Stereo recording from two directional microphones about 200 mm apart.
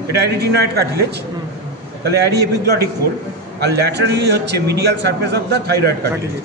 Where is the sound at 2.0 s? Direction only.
55° right (ahead or behind).